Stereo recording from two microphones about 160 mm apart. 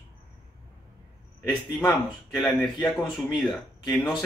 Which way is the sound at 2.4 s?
Centre (ahead or behind).